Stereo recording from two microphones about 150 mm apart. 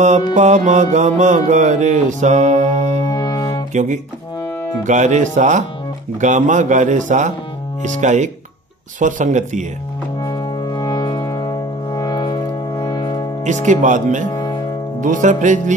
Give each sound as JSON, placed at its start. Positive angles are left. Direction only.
{"t": 0.3, "sound": "music", "side_deg": -55}
{"t": 3.1, "sound": "brass instrument", "side_deg": 25}
{"t": 3.7, "sound": "music", "side_deg": -55}
{"t": 4.8, "sound": "speech", "side_deg": -55}
{"t": 7.8, "sound": "music", "side_deg": -55}
{"t": 9.0, "sound": "speech", "side_deg": -55}
{"t": 10.2, "sound": "music", "side_deg": 30}
{"t": 13.4, "sound": "speech", "side_deg": -55}
{"t": 14.3, "sound": "music", "side_deg": 25}
{"t": 15.0, "sound": "speech", "side_deg": -55}